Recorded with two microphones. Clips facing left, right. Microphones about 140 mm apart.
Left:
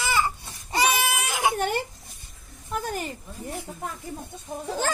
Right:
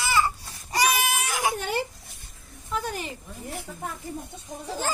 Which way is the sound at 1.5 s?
50° left (ahead or behind).